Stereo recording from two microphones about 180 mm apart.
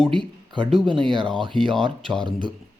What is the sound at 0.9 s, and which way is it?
Speech, 25° right (ahead or behind).